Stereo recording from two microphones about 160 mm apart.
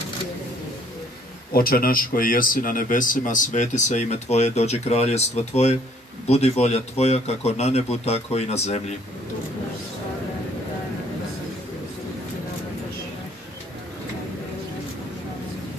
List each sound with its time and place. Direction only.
1.5 s a man's voice: 65° left (ahead or behind); by 8.8 s 40° left (ahead or behind)